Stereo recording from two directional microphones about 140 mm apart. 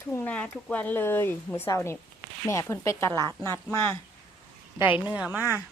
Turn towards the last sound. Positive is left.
turn(degrees=-15)  # may be behind; listen again after turning